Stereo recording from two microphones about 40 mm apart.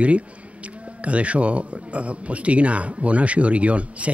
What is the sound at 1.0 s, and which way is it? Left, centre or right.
Speech, right.